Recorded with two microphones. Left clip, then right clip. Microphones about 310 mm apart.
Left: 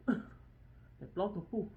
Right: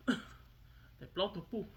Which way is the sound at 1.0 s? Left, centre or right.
Right.